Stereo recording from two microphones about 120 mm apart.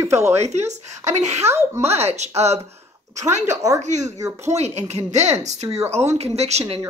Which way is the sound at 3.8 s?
75° right (ahead or behind).